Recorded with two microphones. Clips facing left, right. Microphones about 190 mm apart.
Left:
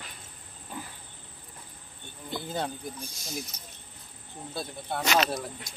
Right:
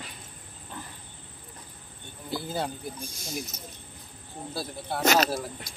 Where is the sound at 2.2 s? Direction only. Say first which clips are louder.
Right 1 dB; 5° right (ahead or behind).